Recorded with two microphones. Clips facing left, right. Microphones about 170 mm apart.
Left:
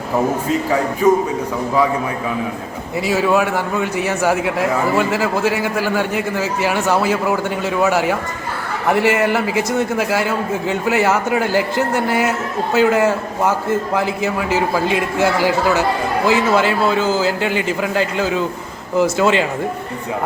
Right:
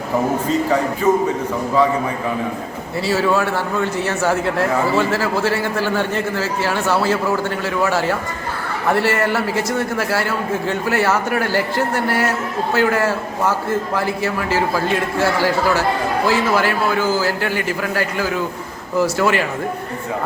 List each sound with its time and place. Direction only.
3.1 s a man's voice: 15° left (ahead or behind)